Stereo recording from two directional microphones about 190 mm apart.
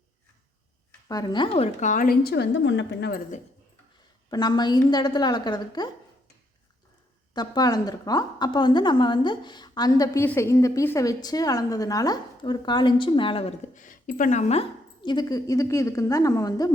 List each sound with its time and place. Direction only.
1.0 s a woman's voice: 20° left (ahead or behind); by 3.2 s 65° left (ahead or behind)
4.3 s a woman's voice: 20° left (ahead or behind)
7.3 s a woman's voice: 20° left (ahead or behind)
13.7 s a woman's voice: 45° left (ahead or behind); by 16.7 s 20° left (ahead or behind)